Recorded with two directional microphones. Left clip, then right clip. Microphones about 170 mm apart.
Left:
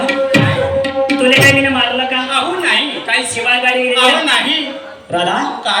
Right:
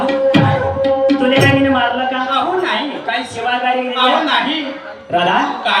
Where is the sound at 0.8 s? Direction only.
25° left (ahead or behind).